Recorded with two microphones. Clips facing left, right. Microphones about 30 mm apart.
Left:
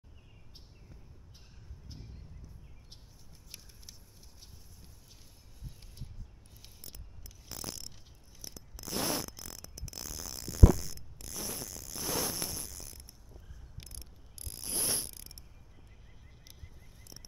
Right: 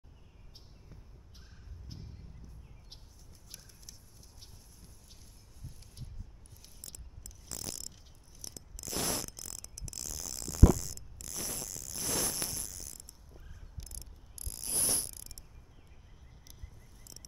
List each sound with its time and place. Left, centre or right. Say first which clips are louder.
1.9 s horse: right 1 dB; centre
7.4 s a sound: even; centre
13.7 s mechanisms: left 1 dB; left